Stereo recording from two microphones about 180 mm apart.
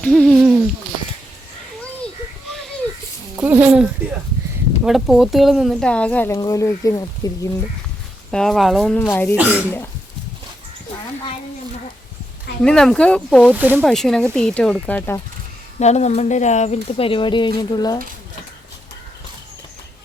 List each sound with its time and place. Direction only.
0.0 s speech: centre (ahead or behind)
3.3 s speech: 10° right (ahead or behind); by 7.4 s 20° left (ahead or behind)
8.3 s speech: centre (ahead or behind)
9.0 s speech: 10° left (ahead or behind)
9.3 s speech: 10° right (ahead or behind)
12.6 s speech: 5° left (ahead or behind)
13.5 s speech: 10° right (ahead or behind)
13.8 s speech: centre (ahead or behind)
15.8 s speech: 40° left (ahead or behind); by 18.0 s 20° left (ahead or behind)